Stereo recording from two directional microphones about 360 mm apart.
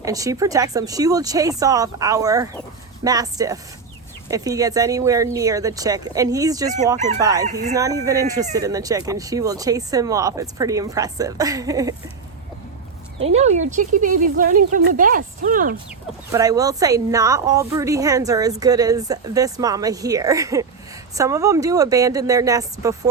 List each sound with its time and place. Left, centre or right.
0.0 s speech: centre
13.2 s speech: centre
16.3 s speech: centre